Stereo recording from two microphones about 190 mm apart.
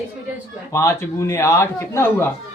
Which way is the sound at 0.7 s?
15° left (ahead or behind).